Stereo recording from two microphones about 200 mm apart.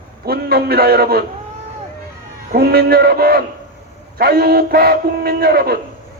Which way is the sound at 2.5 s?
50° right (ahead or behind).